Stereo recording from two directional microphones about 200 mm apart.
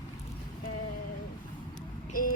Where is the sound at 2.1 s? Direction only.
45° left (ahead or behind).